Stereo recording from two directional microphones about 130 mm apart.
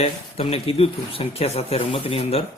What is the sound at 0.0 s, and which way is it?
Speech, 50° left (ahead or behind).